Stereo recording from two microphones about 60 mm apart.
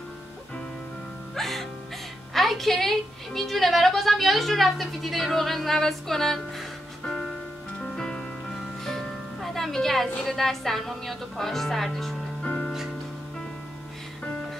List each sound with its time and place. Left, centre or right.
1.3 s music: centre
2.3 s a woman's voice: centre
7.8 s music: centre
10.2 s a woman's voice: centre
12.4 s music: left